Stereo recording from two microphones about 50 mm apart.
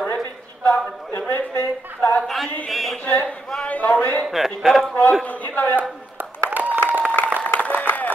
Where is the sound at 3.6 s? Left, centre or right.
Left.